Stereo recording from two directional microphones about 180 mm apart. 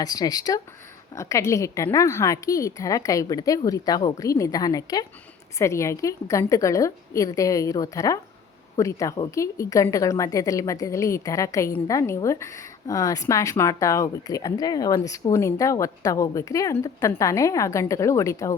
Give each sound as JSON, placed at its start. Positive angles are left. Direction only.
{"t": 0.0, "sound": "a woman's voice", "side_deg": 20}